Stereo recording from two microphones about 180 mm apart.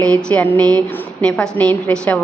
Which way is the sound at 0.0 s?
5° left (ahead or behind).